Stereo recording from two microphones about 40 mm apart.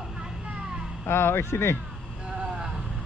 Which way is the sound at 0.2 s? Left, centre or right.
Right.